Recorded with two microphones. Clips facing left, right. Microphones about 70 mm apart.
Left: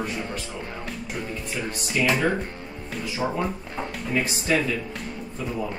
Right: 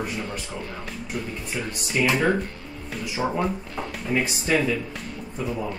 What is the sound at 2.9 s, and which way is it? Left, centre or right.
Speech, centre.